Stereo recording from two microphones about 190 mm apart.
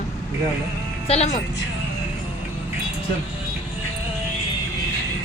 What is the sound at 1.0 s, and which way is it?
Speech, 35° left (ahead or behind).